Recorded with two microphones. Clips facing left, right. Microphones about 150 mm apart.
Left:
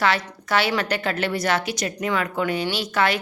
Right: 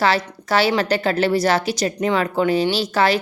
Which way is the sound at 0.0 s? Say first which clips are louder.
Right 3 dB; 35° right (ahead or behind).